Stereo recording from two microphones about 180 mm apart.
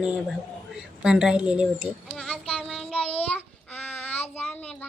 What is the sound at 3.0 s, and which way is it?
Child singing, 35° left (ahead or behind).